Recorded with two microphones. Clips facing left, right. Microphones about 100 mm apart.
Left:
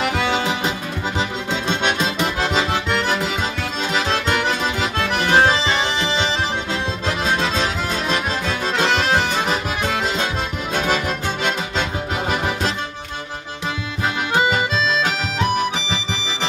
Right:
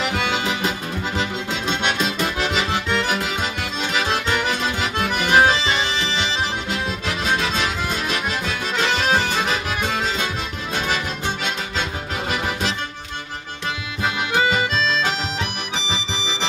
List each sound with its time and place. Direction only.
4.9 s accordion: 10° right (ahead or behind)
5.9 s music: 15° left (ahead or behind)
7.6 s accordion: 35° left (ahead or behind)
10.7 s music: 50° left (ahead or behind)
14.3 s accordion: 25° left (ahead or behind)